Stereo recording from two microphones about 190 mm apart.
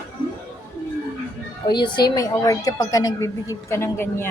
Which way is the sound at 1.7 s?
25° left (ahead or behind).